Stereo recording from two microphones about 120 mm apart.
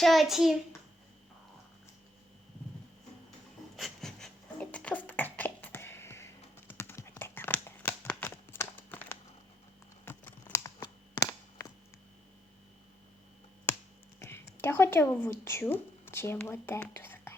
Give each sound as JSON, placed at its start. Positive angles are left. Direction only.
{"t": 0.0, "sound": "a child's voice", "side_deg": 0}
{"t": 3.8, "sound": "a sound", "side_deg": 0}
{"t": 10.1, "sound": "computer keyboard", "side_deg": 20}
{"t": 11.3, "sound": "a sound", "side_deg": 25}
{"t": 14.2, "sound": "a woman's voice", "side_deg": 20}
{"t": 16.9, "sound": "whispering", "side_deg": 20}